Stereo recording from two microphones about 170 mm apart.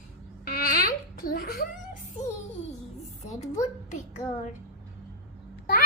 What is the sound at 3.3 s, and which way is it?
Speech, 45° left (ahead or behind).